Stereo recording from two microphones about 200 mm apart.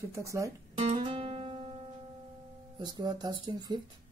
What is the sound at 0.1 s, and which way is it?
Speech, 15° right (ahead or behind).